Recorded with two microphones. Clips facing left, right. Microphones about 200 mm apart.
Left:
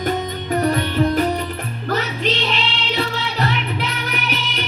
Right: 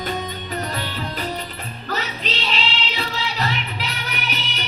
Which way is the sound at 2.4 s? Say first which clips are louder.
Left 3 dB; 55° left (ahead or behind).